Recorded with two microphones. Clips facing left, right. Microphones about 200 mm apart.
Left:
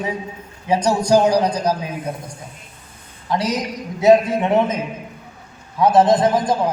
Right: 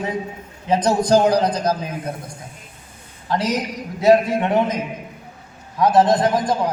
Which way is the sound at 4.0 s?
20° left (ahead or behind).